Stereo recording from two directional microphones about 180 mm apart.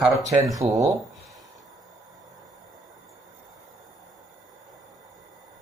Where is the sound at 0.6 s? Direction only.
30° right (ahead or behind).